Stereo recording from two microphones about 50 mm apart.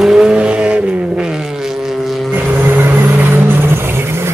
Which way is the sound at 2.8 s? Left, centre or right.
Right.